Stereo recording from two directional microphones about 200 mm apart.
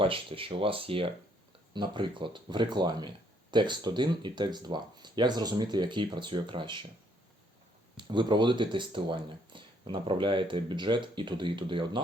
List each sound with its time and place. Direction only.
0.0 s speech: 25° right (ahead or behind)
7.9 s speech: 25° right (ahead or behind)